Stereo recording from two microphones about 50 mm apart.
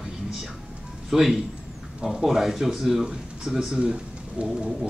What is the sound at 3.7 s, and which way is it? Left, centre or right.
Speech, centre.